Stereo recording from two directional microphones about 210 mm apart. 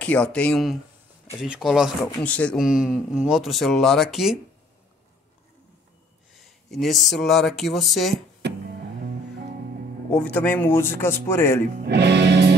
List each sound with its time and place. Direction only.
0.0 s speech: 5° left (ahead or behind)
6.3 s speech: centre (ahead or behind)
8.4 s music: 55° right (ahead or behind)
10.1 s a man's voice: 5° left (ahead or behind)
11.8 s speech: 55° right (ahead or behind)